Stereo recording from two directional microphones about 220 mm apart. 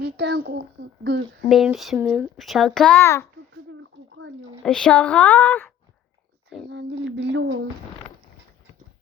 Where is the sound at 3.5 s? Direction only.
60° right (ahead or behind).